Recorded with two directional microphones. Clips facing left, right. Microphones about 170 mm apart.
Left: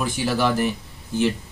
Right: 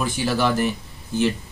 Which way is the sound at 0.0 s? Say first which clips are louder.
Even; 15° left (ahead or behind).